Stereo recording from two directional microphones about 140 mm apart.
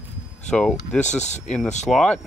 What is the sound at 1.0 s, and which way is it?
Speech, 55° left (ahead or behind).